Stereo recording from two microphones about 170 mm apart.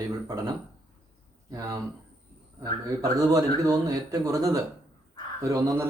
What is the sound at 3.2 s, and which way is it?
Speech, 20° right (ahead or behind).